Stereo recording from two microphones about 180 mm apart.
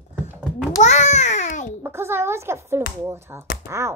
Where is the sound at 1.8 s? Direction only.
15° right (ahead or behind).